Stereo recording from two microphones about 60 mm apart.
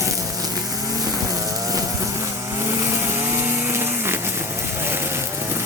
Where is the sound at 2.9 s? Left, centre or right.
Right.